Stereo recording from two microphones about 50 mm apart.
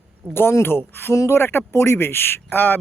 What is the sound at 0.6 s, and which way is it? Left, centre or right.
Speech, left.